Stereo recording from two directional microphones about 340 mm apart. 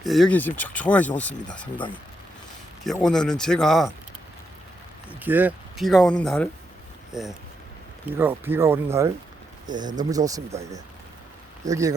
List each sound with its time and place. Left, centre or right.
0.0 s speech: centre
2.8 s speech: centre
5.2 s speech: centre